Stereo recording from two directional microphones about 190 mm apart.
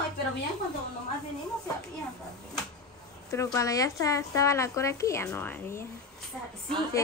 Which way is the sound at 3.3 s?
15° left (ahead or behind).